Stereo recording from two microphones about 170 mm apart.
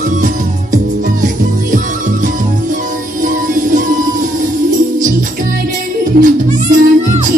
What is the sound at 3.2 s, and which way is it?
Music, 50° right (ahead or behind).